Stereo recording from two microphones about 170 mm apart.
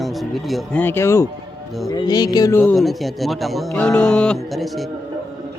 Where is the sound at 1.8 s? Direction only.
25° left (ahead or behind).